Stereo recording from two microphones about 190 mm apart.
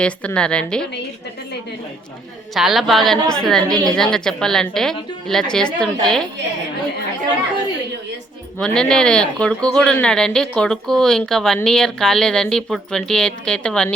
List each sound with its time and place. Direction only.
0.0 s speech: 5° left (ahead or behind)
2.6 s speech: centre (ahead or behind)
8.5 s speech: 5° left (ahead or behind)